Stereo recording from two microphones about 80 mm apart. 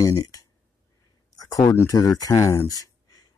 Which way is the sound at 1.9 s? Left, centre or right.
Left.